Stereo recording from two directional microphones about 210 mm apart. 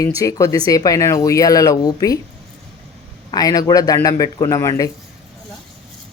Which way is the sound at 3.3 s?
15° left (ahead or behind).